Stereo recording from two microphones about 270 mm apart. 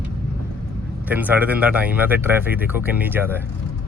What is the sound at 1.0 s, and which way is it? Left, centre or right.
Speech, centre.